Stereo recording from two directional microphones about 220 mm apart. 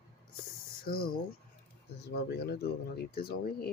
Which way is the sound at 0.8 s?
40° left (ahead or behind).